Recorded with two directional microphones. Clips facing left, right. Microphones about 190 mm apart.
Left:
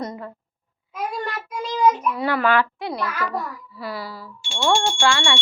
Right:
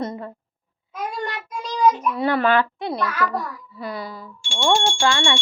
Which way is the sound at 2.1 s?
25° right (ahead or behind).